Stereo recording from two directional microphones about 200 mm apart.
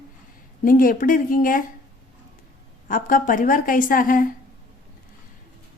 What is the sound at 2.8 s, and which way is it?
A woman's voice, 45° left (ahead or behind).